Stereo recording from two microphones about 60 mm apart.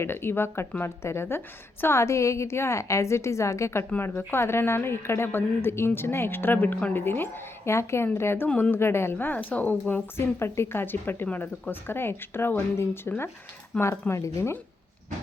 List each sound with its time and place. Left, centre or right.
0.0 s a woman's voice: left
3.9 s a woman's voice: left
8.4 s a woman's voice: centre
8.7 s speech: left
9.1 s a woman's voice: left
10.2 s a woman's voice: left
13.7 s a woman's voice: centre
14.1 s speech: left